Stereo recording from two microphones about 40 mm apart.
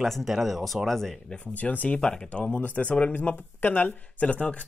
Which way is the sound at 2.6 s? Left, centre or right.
Left.